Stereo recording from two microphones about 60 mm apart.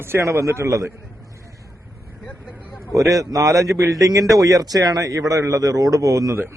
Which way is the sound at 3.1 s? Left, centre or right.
Right.